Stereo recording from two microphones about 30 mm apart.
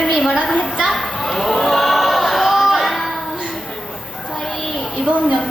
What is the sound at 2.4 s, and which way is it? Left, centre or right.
Music, centre.